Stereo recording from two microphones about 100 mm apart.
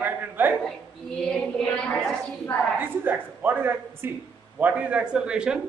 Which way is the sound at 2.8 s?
20° right (ahead or behind).